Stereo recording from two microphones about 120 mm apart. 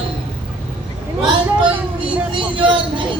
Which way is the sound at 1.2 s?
45° right (ahead or behind).